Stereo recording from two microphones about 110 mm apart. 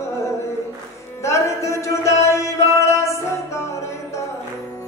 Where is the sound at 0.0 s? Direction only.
25° left (ahead or behind).